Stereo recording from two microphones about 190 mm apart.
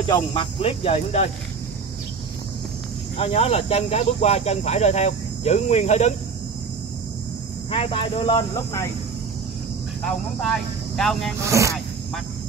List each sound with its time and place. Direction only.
0.3 s speech: 30° left (ahead or behind)
3.2 s speech: 30° left (ahead or behind)
7.7 s speech: 25° left (ahead or behind)
10.4 s speech: centre (ahead or behind)
11.4 s speech: 15° right (ahead or behind)